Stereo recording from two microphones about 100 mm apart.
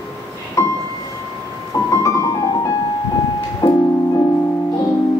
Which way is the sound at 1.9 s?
30° left (ahead or behind).